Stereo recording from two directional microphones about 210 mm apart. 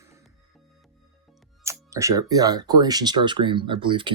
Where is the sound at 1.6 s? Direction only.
15° right (ahead or behind).